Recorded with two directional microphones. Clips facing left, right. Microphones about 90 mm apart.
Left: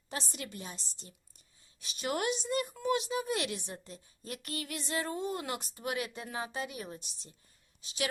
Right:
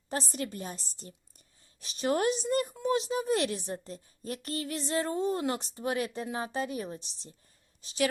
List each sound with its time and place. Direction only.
0.1 s a woman's voice: 40° right (ahead or behind)